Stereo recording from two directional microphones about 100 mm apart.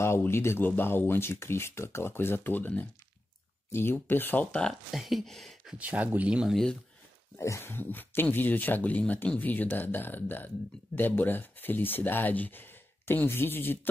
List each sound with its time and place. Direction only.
0.0 s speech: 25° left (ahead or behind); by 4.7 s 10° left (ahead or behind)
4.9 s speech: centre (ahead or behind)
5.8 s speech: 15° right (ahead or behind)
6.5 s speech: 5° left (ahead or behind)
7.3 s speech: 30° left (ahead or behind)